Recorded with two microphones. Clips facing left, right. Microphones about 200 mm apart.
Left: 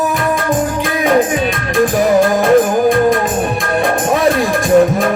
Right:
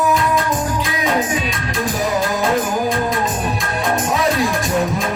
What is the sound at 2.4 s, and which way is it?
Music, 50° left (ahead or behind).